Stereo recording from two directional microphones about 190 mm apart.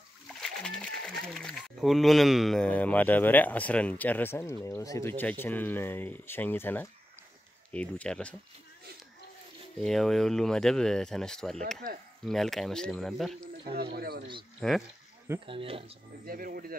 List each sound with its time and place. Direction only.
0.3 s speech: 5° left (ahead or behind)
9.8 s speech: centre (ahead or behind)
13.9 s speech: 55° right (ahead or behind)
14.6 s speech: 5° left (ahead or behind)
15.4 s speech: 30° right (ahead or behind)
16.3 s speech: 50° right (ahead or behind)